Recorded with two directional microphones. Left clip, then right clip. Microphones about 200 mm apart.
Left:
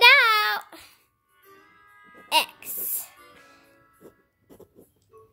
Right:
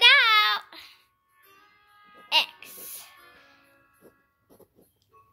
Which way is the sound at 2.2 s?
40° left (ahead or behind).